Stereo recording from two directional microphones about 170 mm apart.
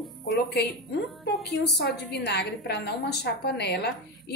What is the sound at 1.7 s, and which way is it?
A woman's voice, 80° left.